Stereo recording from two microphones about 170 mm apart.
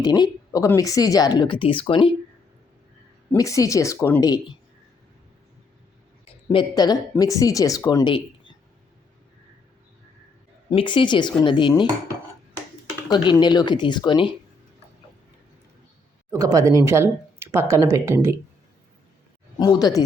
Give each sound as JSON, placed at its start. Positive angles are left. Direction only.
{"t": 0.0, "sound": "speech", "side_deg": 25}
{"t": 3.3, "sound": "speech", "side_deg": 20}
{"t": 6.5, "sound": "speech", "side_deg": 25}
{"t": 10.7, "sound": "speech", "side_deg": 30}
{"t": 13.1, "sound": "speech", "side_deg": 25}
{"t": 16.3, "sound": "speech", "side_deg": -20}
{"t": 19.5, "sound": "speech", "side_deg": 25}